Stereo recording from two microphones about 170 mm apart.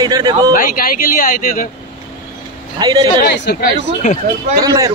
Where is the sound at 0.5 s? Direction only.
55° left (ahead or behind).